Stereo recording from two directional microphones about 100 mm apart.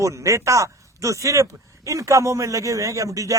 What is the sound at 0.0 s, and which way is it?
Speech, 30° right (ahead or behind).